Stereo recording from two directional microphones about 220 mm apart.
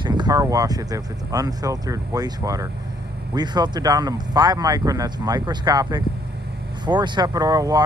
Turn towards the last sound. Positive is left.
turn(degrees=-15)  # may be behind; listen again after turning